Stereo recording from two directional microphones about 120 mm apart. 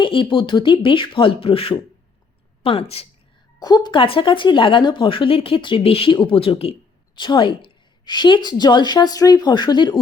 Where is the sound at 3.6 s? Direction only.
35° left (ahead or behind); by 6.7 s 50° left (ahead or behind).